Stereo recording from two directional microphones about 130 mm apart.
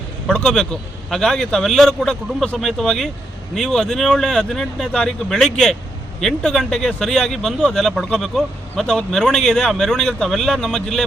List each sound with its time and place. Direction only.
0.3 s speech: 5° left (ahead or behind)